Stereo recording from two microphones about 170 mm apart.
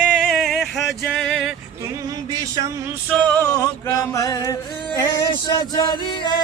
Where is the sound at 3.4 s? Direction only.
15° left (ahead or behind).